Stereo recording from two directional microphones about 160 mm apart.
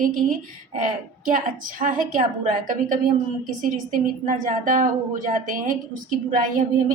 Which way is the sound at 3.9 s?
55° right (ahead or behind).